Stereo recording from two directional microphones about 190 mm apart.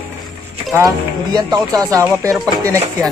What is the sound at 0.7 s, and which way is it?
Speech, 20° right (ahead or behind).